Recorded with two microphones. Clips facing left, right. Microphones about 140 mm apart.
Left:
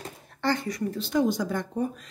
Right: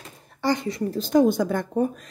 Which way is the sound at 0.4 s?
15° right (ahead or behind).